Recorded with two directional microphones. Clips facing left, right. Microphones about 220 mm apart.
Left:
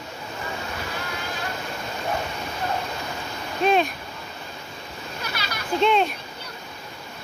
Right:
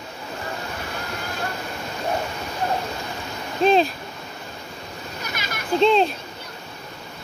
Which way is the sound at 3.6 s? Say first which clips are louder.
Right 3 dB; 30° right (ahead or behind).